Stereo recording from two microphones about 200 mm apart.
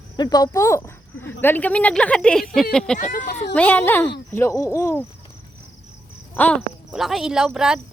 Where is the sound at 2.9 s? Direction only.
40° left (ahead or behind).